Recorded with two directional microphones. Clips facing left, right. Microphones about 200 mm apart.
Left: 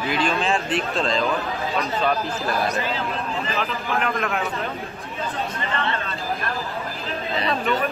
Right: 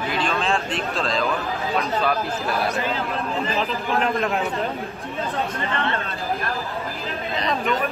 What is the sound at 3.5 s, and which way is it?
Speech, 30° right (ahead or behind).